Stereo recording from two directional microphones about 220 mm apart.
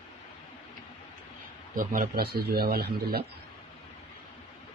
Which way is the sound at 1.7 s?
40° right (ahead or behind).